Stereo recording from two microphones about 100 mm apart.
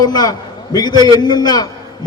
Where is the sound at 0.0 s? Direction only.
40° left (ahead or behind).